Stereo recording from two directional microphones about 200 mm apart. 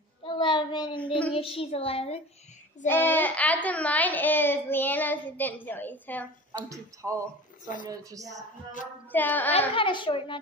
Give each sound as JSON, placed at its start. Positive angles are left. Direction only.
{"t": 0.2, "sound": "child singing", "side_deg": 25}
{"t": 1.3, "sound": "a child's voice", "side_deg": 25}
{"t": 2.9, "sound": "a child's voice", "side_deg": 10}
{"t": 6.7, "sound": "a woman's voice", "side_deg": -15}
{"t": 9.1, "sound": "a child's voice", "side_deg": 10}
{"t": 9.8, "sound": "a child's voice", "side_deg": 25}